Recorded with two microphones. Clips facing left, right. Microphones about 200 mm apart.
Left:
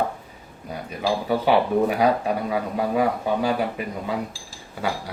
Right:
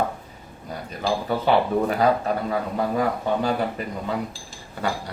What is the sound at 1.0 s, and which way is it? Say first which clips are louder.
Speech: left 1 dB; 10° left (ahead or behind).